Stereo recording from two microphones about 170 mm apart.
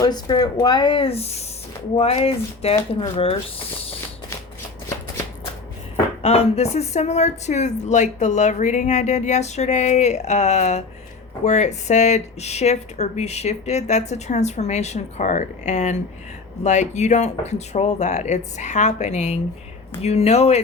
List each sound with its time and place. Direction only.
0.0 s speech: 25° left (ahead or behind)
6.2 s speech: 40° left (ahead or behind)